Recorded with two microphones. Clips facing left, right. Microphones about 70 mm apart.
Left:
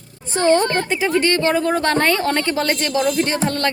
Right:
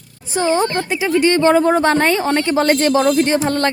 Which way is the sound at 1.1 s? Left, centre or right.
Right.